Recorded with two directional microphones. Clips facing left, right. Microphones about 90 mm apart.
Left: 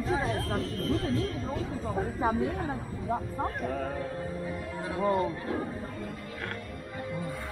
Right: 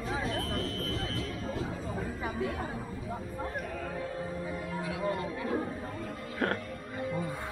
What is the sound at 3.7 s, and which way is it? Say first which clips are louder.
Speech: left 5 dB; 40° left (ahead or behind).